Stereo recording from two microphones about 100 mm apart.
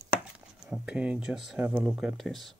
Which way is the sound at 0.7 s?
10° right (ahead or behind).